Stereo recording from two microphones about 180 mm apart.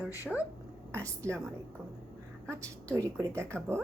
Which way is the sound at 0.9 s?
15° right (ahead or behind).